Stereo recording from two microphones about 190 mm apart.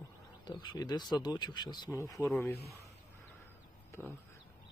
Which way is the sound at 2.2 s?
Centre (ahead or behind).